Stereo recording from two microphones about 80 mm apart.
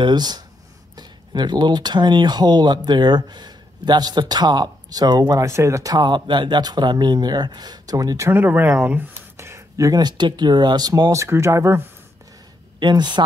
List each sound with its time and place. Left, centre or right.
0.0 s speech: right
5.3 s speech: right
5.9 s speech: right
8.3 s speech: right
8.6 s a sound: right
10.0 s speech: right
11.1 s speech: right
12.7 s speech: right